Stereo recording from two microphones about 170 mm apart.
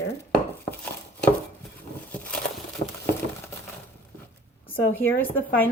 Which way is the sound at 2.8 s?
35° left (ahead or behind).